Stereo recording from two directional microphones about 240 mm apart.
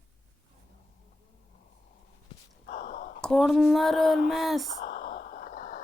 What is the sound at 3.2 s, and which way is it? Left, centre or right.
Speech, centre.